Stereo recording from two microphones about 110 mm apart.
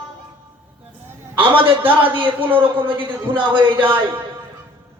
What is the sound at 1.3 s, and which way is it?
A man's voice, 50° right (ahead or behind).